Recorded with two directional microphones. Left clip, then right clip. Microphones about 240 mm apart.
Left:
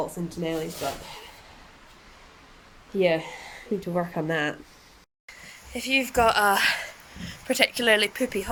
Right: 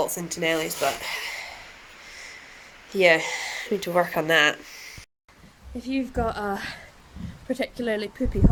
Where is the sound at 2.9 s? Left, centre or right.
Centre.